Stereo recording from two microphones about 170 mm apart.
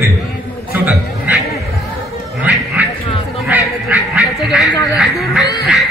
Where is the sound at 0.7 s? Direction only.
10° right (ahead or behind).